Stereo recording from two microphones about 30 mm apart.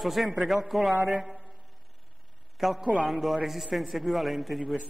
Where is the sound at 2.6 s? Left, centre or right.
Centre.